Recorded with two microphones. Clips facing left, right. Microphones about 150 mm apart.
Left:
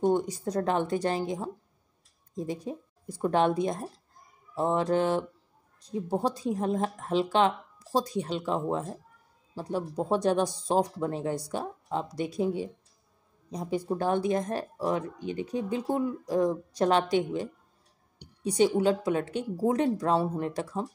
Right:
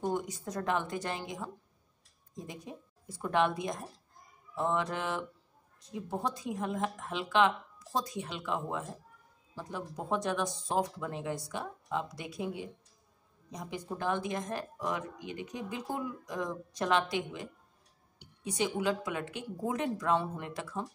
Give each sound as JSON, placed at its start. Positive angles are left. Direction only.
{"t": 0.0, "sound": "speech", "side_deg": 30}